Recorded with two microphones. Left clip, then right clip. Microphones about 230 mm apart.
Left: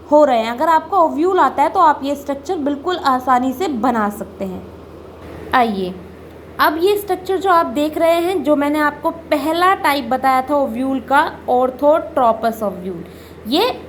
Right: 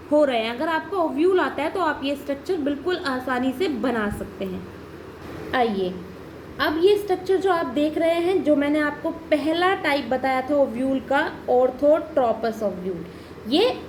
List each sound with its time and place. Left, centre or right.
0.1 s a woman's voice: centre
5.5 s a woman's voice: left